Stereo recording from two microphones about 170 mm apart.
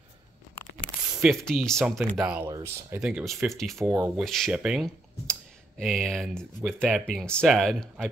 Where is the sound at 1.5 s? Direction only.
5° left (ahead or behind); by 2.9 s 15° right (ahead or behind).